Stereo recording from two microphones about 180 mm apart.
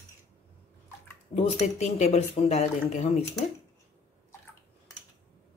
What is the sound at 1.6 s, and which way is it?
A woman's voice, 40° left (ahead or behind).